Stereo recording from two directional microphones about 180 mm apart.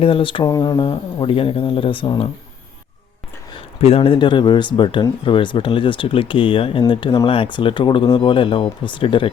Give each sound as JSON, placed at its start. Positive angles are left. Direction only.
{"t": 0.0, "sound": "speech", "side_deg": 30}
{"t": 3.8, "sound": "speech", "side_deg": 35}